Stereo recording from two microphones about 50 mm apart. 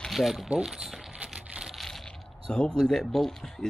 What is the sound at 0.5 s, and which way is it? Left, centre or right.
Speech, centre.